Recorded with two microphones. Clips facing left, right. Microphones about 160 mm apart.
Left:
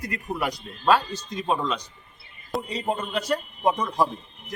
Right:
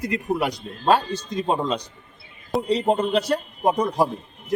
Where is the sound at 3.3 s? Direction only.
35° right (ahead or behind).